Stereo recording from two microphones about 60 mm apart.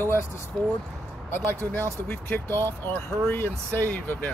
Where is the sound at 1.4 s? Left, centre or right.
Right.